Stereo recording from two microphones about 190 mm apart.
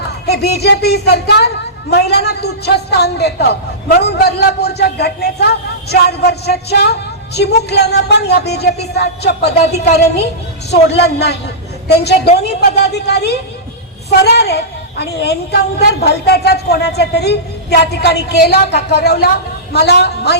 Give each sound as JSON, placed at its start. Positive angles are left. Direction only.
{"t": 0.3, "sound": "a man's voice", "side_deg": 60}